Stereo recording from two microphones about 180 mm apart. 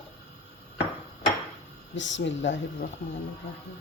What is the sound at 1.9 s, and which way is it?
Speech, 90° left.